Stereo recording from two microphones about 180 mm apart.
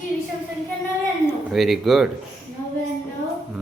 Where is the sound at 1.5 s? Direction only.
Centre (ahead or behind).